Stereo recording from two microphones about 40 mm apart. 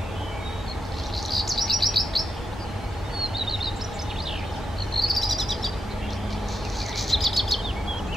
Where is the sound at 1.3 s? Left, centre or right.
Centre.